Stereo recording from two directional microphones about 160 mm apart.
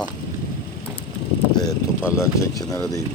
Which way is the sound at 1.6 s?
20° left (ahead or behind).